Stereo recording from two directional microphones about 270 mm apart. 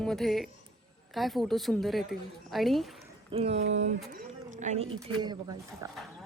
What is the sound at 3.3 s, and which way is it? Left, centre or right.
Speech, right.